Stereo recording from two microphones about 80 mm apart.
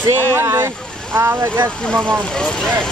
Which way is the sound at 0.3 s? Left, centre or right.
Right.